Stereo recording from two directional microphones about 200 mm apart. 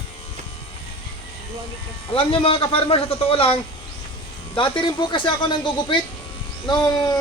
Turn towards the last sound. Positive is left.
turn(degrees=20)  # may be behind; listen again after turning